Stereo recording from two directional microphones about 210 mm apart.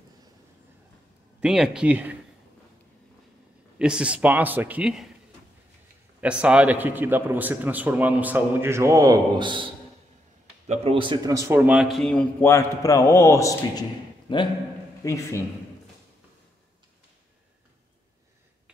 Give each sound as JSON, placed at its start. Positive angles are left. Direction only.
{"t": 1.4, "sound": "a man's voice", "side_deg": -5}
{"t": 3.7, "sound": "a man's voice", "side_deg": -5}
{"t": 6.2, "sound": "a man's voice", "side_deg": -5}
{"t": 10.7, "sound": "a man's voice", "side_deg": -30}